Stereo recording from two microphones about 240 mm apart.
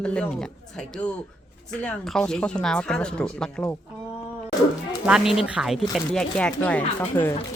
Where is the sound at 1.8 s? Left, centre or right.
Centre.